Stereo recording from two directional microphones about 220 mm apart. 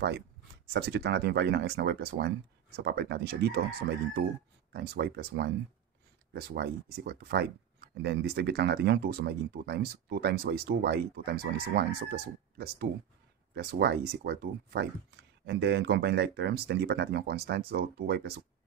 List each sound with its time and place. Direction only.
0.7 s speech: 50° right (ahead or behind)
4.7 s speech: 45° right (ahead or behind)